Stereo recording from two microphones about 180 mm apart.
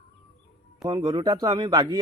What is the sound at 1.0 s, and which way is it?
Speech, 20° right (ahead or behind).